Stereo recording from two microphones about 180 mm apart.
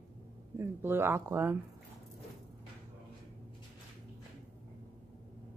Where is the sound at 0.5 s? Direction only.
15° right (ahead or behind).